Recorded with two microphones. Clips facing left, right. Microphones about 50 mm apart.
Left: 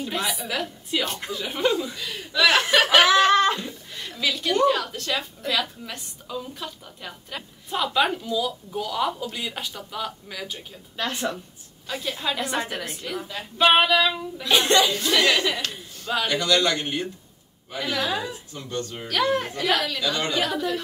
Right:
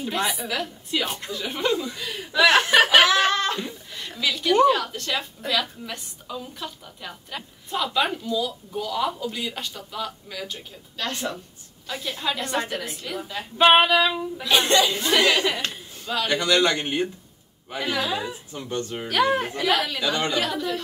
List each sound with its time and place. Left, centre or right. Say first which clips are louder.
0.1 s a woman's voice: right 3 dB; centre
2.7 s snicker: right 2 dB; centre
3.3 s a sound: left 5 dB; centre
3.5 s chuckle: right 1 dB; centre
4.2 s a woman's voice: right 3 dB; centre
13.6 s a woman's voice: right 2 dB; centre
14.9 s a woman's voice: right 1 dB; centre
20.0 s a woman's voice: right 1 dB; centre
20.4 s a woman's voice: left 1 dB; centre